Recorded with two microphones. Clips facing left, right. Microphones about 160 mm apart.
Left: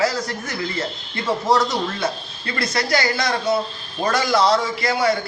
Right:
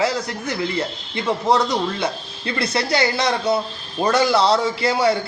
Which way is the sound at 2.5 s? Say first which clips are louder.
Right 1 dB; 25° right (ahead or behind).